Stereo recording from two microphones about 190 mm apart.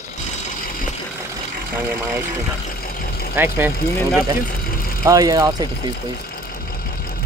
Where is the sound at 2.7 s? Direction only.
50° left (ahead or behind).